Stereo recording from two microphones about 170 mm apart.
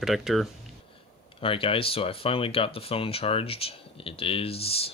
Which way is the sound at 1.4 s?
30° left (ahead or behind).